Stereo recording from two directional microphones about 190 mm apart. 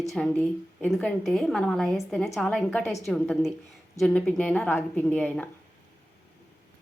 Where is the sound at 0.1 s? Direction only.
5° left (ahead or behind).